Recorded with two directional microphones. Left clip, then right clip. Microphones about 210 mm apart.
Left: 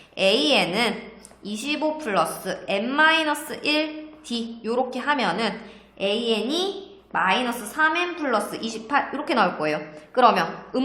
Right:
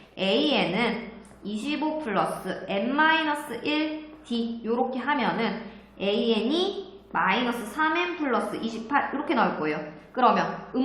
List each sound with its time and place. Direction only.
0.2 s a woman's voice: 45° left (ahead or behind)